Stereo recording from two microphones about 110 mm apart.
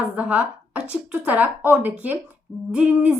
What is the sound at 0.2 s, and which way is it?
A woman's voice, 15° right (ahead or behind).